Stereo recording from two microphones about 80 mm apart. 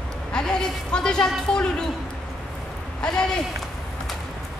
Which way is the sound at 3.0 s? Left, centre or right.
Centre.